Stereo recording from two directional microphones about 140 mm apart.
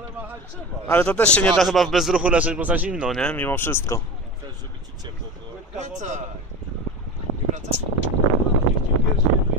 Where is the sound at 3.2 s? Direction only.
10° left (ahead or behind).